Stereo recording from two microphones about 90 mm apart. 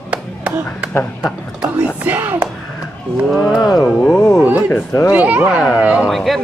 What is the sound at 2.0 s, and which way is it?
Speech, 20° right (ahead or behind).